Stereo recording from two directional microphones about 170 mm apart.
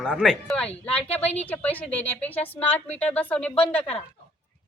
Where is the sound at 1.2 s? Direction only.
40° left (ahead or behind).